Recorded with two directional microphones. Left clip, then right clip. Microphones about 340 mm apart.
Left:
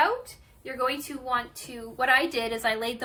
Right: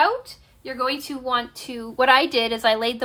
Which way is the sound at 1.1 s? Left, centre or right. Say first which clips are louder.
Right 5 dB; centre.